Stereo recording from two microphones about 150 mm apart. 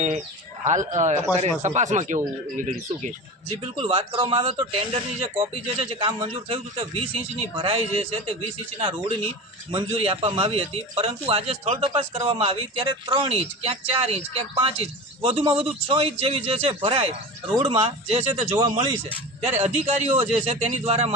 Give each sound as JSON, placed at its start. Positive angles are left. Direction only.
{"t": 0.6, "sound": "a man's voice", "side_deg": -55}
{"t": 3.8, "sound": "speech", "side_deg": -40}